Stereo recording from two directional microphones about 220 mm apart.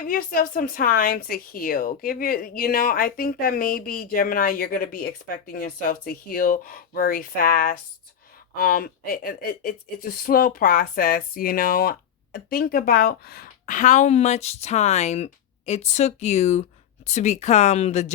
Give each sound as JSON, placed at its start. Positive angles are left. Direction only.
{"t": 0.1, "sound": "speech", "side_deg": 40}